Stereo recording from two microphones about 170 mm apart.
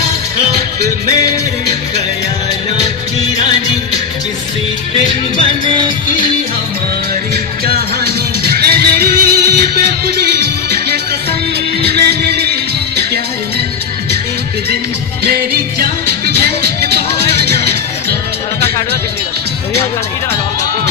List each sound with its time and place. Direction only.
5.4 s music: 30° right (ahead or behind)
7.6 s music: 65° right (ahead or behind)
15.8 s music: 60° right (ahead or behind)